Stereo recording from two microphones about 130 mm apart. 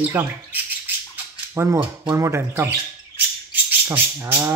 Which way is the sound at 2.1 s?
20° right (ahead or behind).